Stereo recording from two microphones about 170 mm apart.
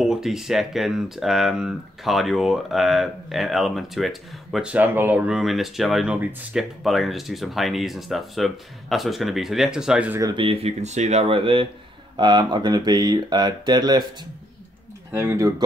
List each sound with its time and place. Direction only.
0.0 s speech: 5° right (ahead or behind)
10.2 s speech: 30° right (ahead or behind)
15.1 s speech: 15° right (ahead or behind)